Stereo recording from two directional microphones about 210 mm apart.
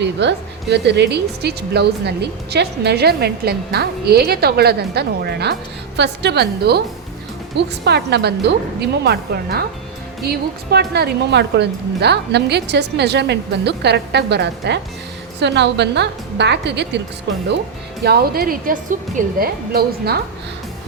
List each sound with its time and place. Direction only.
0.0 s a woman's voice: 55° right (ahead or behind)
18.0 s a woman's voice: 45° right (ahead or behind)